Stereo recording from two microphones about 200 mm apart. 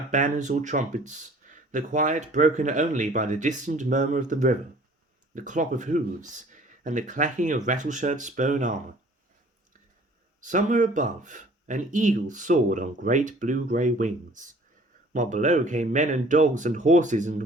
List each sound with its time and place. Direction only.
0.1 s speech: 40° right (ahead or behind)
10.4 s speech: 40° right (ahead or behind)